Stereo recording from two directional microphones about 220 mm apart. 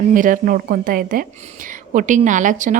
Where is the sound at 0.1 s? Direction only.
35° right (ahead or behind).